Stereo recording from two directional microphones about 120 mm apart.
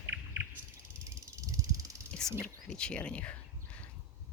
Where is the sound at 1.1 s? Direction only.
30° right (ahead or behind).